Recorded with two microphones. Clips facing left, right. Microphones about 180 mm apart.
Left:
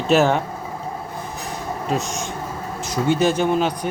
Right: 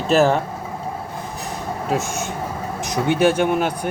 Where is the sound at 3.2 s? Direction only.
60° right (ahead or behind).